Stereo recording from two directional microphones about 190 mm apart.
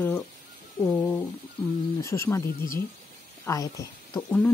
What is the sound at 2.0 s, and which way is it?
Speech, 15° left (ahead or behind).